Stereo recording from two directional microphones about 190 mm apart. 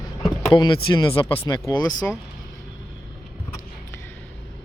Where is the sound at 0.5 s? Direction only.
25° left (ahead or behind).